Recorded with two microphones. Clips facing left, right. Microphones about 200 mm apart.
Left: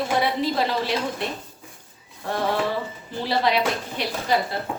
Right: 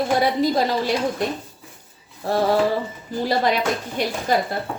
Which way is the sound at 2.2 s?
35° right (ahead or behind).